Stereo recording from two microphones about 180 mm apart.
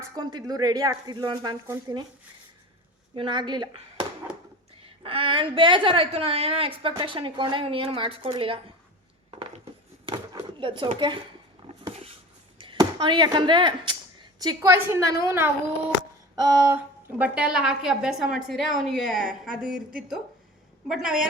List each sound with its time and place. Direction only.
0.0 s a woman's voice: 20° right (ahead or behind)
3.2 s a woman's voice: 25° right (ahead or behind)
10.1 s a sound: 30° right (ahead or behind)
12.5 s a woman's voice: 25° right (ahead or behind); by 19.8 s 5° right (ahead or behind)
20.8 s a woman's voice: 5° right (ahead or behind)